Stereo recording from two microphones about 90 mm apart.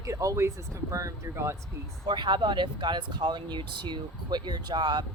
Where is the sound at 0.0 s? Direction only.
35° right (ahead or behind).